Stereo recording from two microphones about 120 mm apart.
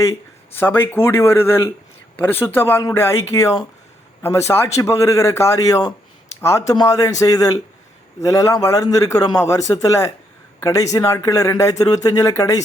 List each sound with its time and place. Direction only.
0.1 s a man's voice: 20° left (ahead or behind)